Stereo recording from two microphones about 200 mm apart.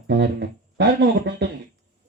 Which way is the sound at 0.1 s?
60° right (ahead or behind).